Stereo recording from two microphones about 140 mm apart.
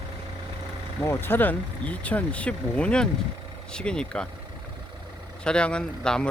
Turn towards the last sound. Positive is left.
turn(degrees=5)  # may be behind; listen again after turning